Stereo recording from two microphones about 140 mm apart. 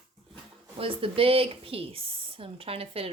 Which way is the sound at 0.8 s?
40° right (ahead or behind).